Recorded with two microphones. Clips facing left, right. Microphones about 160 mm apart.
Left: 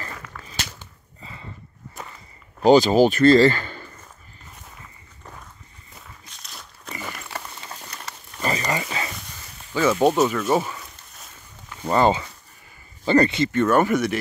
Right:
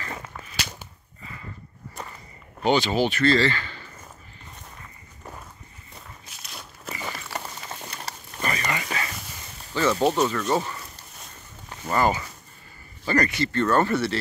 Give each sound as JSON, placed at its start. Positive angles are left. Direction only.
{"t": 0.1, "sound": "a sound", "side_deg": -25}
{"t": 2.6, "sound": "speech", "side_deg": 40}
{"t": 5.9, "sound": "walk", "side_deg": 0}
{"t": 8.5, "sound": "a sound", "side_deg": 30}
{"t": 9.8, "sound": "speech", "side_deg": 15}
{"t": 11.9, "sound": "speech", "side_deg": 25}